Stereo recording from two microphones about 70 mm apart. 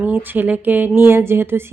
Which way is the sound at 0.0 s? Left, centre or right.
Right.